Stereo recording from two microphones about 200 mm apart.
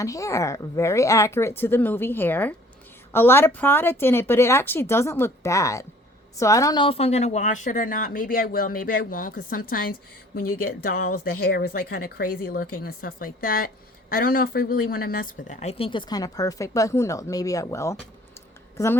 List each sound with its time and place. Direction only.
0.0 s speech: 15° left (ahead or behind)